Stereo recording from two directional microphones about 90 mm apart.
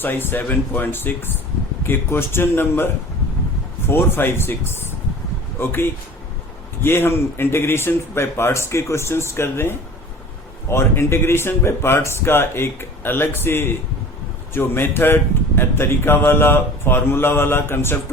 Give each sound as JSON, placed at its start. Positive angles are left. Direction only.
{"t": 0.0, "sound": "a man's voice", "side_deg": 25}